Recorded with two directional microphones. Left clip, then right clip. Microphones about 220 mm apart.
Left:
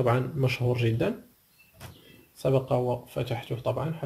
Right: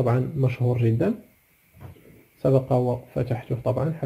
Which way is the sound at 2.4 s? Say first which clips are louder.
Right 4 dB; 20° right (ahead or behind).